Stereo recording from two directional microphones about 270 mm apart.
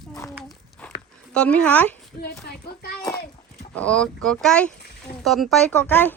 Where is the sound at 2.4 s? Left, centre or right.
Left.